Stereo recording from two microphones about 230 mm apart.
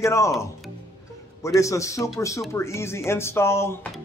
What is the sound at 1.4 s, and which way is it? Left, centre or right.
Speech, centre.